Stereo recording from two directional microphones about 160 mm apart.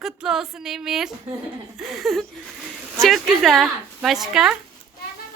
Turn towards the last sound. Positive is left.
turn(degrees=0)  # may be behind; listen again after turning